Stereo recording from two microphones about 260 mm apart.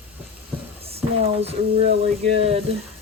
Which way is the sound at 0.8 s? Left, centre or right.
Right.